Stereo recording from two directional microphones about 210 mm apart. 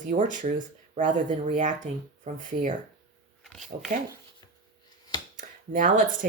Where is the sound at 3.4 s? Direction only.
Centre (ahead or behind).